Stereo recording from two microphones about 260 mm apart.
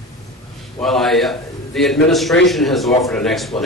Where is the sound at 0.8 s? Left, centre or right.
Centre.